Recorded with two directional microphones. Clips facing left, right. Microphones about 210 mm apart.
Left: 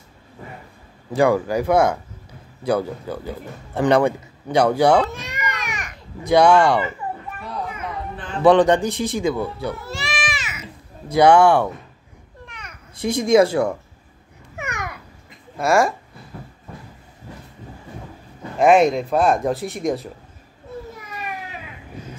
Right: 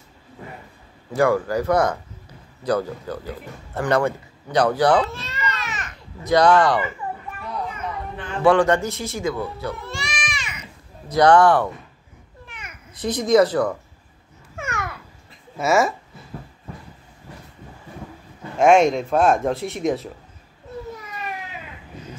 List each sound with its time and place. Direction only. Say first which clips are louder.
1.1 s speech: left 2 dB; 15° left (ahead or behind)
5.0 s children playing: left 1 dB; 15° left (ahead or behind)
6.4 s speech: left 1 dB; 10° left (ahead or behind)
8.5 s speech: left 3 dB; 15° left (ahead or behind)
12.4 s children playing: even; 5° right (ahead or behind)
13.0 s speech: left 1 dB; 10° left (ahead or behind)
14.6 s babbling: even; 15° left (ahead or behind)
15.5 s speech: left 1 dB; 5° right (ahead or behind)
18.6 s speech: left 1 dB; centre (ahead or behind)